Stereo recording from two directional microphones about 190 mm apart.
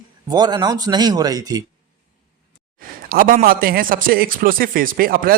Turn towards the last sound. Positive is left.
turn(degrees=-50)  # may be behind; listen again after turning